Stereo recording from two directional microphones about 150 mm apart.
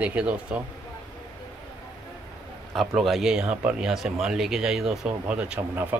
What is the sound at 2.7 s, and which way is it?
Speech, centre (ahead or behind).